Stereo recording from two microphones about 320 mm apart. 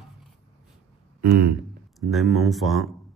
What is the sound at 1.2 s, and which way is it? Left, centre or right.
Speech, right.